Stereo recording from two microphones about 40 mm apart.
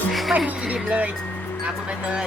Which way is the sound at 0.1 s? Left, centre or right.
Centre.